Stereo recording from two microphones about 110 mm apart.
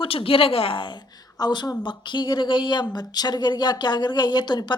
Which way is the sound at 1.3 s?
40° left (ahead or behind).